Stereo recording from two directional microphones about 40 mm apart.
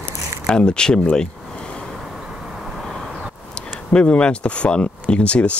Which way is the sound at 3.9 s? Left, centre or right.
Left.